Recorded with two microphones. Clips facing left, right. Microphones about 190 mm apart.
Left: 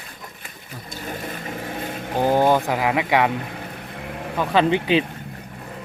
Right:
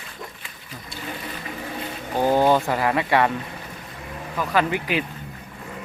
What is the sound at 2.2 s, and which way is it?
Speech, 15° left (ahead or behind).